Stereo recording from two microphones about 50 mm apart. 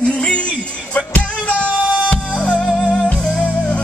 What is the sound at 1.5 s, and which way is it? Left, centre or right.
Music, left.